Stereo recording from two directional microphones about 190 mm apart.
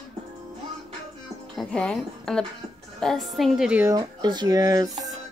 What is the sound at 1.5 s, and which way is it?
Speech, 5° left (ahead or behind).